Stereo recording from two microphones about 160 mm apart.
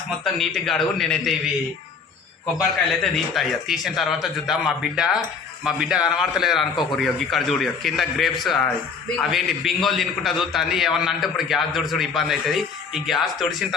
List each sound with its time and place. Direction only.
0.3 s a man's voice: centre (ahead or behind)
2.6 s a man's voice: centre (ahead or behind)